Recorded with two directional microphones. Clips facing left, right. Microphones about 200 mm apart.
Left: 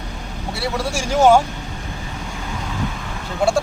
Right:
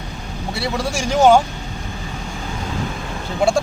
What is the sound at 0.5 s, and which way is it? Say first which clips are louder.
Speech: right 1 dB; 5° left (ahead or behind).